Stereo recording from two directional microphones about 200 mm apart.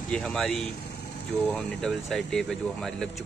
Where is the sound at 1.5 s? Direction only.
Centre (ahead or behind).